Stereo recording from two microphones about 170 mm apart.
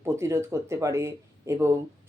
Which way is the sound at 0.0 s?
15° right (ahead or behind).